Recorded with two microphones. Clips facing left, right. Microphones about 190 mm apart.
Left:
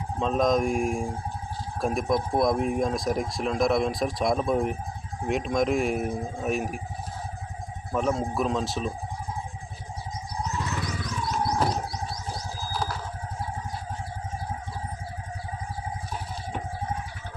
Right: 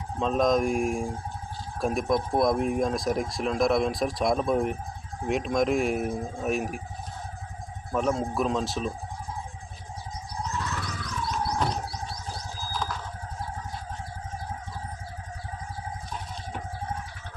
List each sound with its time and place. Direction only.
0.2 s speech: centre (ahead or behind)
7.9 s speech: centre (ahead or behind)
10.3 s music: 15° left (ahead or behind)
11.5 s music: 30° left (ahead or behind)
12.3 s music: 15° left (ahead or behind)
12.7 s a sound: 35° left (ahead or behind)